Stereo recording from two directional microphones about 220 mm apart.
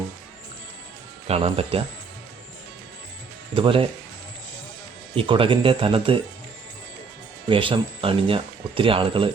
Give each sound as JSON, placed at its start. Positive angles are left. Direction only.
{"t": 1.3, "sound": "speech", "side_deg": -25}
{"t": 3.5, "sound": "speech", "side_deg": -25}
{"t": 5.1, "sound": "speech", "side_deg": -25}
{"t": 7.4, "sound": "speech", "side_deg": -25}